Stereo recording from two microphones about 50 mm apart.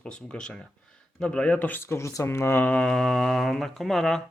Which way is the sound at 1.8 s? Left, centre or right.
Left.